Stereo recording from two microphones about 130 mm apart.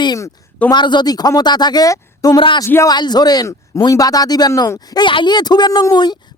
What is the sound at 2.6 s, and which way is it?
Speech, 25° left (ahead or behind).